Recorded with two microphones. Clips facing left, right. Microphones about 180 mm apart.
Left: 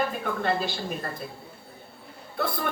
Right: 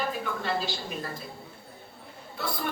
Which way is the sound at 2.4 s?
55° left (ahead or behind).